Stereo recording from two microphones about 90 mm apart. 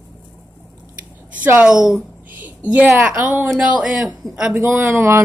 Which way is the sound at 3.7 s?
15° right (ahead or behind).